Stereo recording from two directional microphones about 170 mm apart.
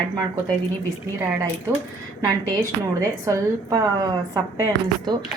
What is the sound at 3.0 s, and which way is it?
Speech, 20° right (ahead or behind).